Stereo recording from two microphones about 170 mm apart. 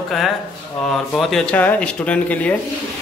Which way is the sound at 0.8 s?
Centre (ahead or behind).